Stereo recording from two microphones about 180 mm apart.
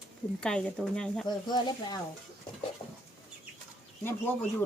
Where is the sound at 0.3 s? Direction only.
5° left (ahead or behind).